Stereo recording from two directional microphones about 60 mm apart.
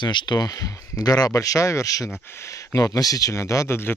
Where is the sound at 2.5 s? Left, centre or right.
Left.